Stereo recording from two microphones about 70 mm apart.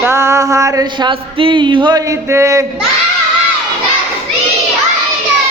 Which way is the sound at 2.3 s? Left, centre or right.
Right.